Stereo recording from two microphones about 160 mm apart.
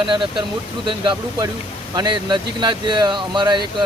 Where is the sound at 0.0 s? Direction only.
30° right (ahead or behind).